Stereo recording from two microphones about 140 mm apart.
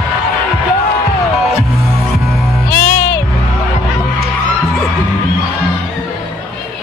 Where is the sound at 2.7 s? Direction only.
15° left (ahead or behind).